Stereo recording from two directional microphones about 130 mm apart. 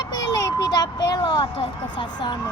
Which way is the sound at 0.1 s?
30° left (ahead or behind).